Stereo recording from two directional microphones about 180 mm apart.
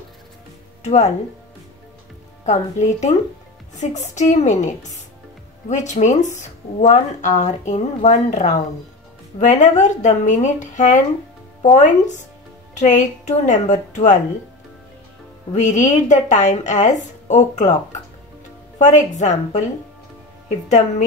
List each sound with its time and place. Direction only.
0.8 s speech: 40° left (ahead or behind)
2.4 s speech: 40° left (ahead or behind)
15.5 s speech: 40° left (ahead or behind)
18.8 s a woman's voice: 40° left (ahead or behind)